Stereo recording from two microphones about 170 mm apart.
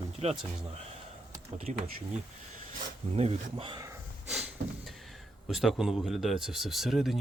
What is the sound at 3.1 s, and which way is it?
Speech, 35° right (ahead or behind).